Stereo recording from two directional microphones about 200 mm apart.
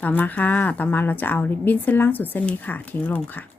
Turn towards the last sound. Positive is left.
turn(degrees=10)  # may be behind; listen again after turning